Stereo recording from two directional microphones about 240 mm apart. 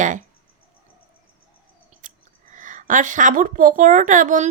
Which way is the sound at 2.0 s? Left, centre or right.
Right.